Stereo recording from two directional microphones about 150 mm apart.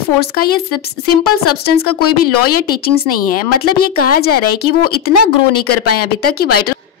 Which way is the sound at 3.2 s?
75° left (ahead or behind).